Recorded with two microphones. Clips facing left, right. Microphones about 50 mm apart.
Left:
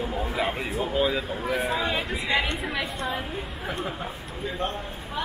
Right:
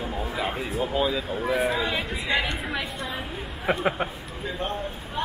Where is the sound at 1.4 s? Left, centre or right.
Right.